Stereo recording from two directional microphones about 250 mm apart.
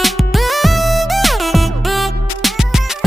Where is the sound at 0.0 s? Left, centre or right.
Centre.